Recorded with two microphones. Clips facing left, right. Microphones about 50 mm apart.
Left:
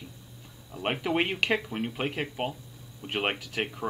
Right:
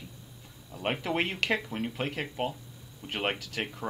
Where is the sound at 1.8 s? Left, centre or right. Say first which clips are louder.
Left 2 dB; centre.